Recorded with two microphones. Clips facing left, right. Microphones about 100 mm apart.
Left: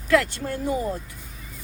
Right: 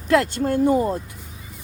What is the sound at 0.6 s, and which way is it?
Speech, 60° right (ahead or behind).